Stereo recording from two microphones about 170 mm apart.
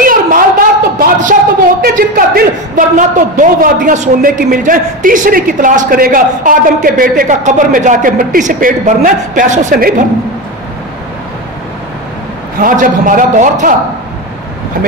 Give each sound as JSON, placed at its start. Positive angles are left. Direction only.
{"t": 0.0, "sound": "a sound", "side_deg": -55}
{"t": 1.8, "sound": "a man's voice", "side_deg": -60}
{"t": 12.5, "sound": "a man's voice", "side_deg": -55}